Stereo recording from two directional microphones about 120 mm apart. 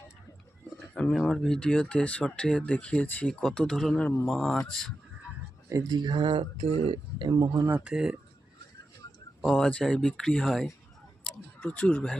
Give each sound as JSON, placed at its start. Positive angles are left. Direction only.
{"t": 1.1, "sound": "speech", "side_deg": 5}
{"t": 5.6, "sound": "speech", "side_deg": -30}
{"t": 7.9, "sound": "speech", "side_deg": -5}
{"t": 9.4, "sound": "speech", "side_deg": 0}
{"t": 11.2, "sound": "a sound", "side_deg": 5}